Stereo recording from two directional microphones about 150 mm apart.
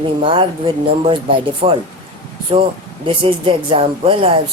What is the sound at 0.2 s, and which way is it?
Speech, 35° right (ahead or behind).